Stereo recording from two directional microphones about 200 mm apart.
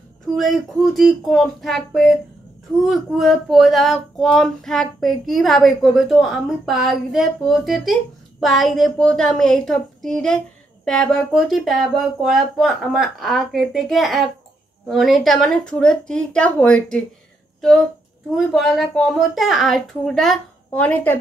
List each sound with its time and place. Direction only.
0.4 s speech: centre (ahead or behind)